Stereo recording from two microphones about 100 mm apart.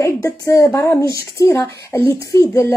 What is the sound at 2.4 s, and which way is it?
Speech, 35° left (ahead or behind).